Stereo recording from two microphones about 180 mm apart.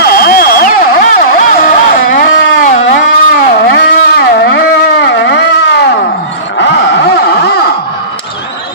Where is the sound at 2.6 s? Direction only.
45° left (ahead or behind).